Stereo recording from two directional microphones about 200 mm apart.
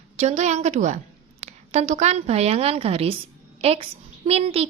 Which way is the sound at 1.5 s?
35° right (ahead or behind).